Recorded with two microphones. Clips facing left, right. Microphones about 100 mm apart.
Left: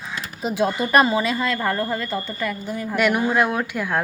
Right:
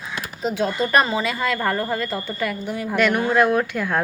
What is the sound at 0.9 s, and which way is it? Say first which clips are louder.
A woman's voice: left 4 dB; 5° left (ahead or behind).